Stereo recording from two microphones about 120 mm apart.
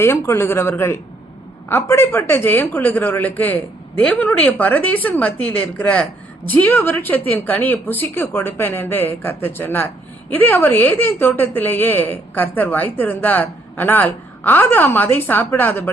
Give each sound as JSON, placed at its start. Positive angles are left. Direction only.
{"t": 0.0, "sound": "a woman's voice", "side_deg": 20}